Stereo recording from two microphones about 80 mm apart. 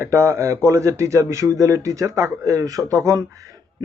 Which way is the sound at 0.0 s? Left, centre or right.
Right.